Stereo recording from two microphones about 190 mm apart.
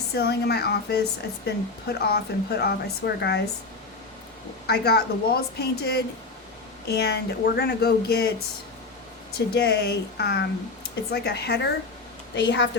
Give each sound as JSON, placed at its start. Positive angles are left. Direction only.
{"t": 0.1, "sound": "speech", "side_deg": 60}
{"t": 4.6, "sound": "speech", "side_deg": 60}
{"t": 9.6, "sound": "speech", "side_deg": 60}